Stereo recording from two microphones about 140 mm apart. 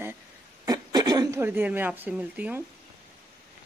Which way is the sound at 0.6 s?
25° right (ahead or behind).